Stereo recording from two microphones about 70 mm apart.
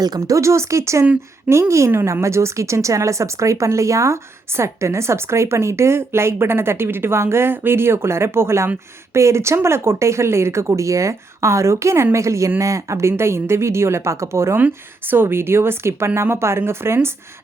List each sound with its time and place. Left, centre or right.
0.0 s speech: right
0.3 s speech: right
15.1 s speech: right